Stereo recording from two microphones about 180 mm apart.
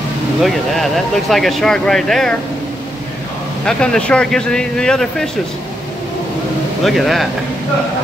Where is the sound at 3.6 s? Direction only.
5° left (ahead or behind).